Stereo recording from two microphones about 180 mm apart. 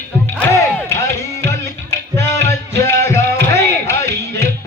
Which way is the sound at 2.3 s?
15° left (ahead or behind).